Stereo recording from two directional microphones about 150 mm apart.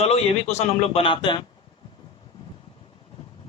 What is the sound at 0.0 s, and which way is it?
Speech, 45° left (ahead or behind).